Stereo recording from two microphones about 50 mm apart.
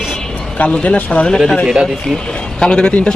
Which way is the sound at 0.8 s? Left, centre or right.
Left.